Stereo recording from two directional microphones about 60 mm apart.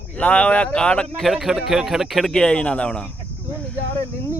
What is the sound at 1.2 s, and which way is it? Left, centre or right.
A man's voice, centre.